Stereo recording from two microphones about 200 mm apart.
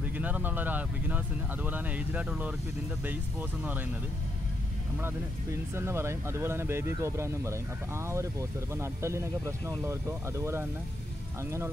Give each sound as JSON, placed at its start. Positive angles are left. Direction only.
{"t": 0.2, "sound": "speech", "side_deg": -10}
{"t": 5.8, "sound": "speech", "side_deg": -15}